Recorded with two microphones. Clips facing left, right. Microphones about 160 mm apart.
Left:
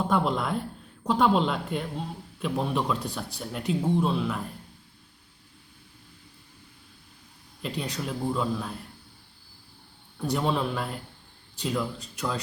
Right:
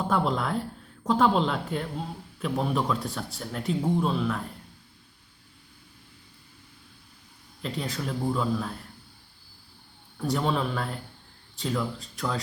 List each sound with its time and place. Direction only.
0.1 s speech: centre (ahead or behind)
7.6 s speech: centre (ahead or behind)
10.2 s speech: centre (ahead or behind)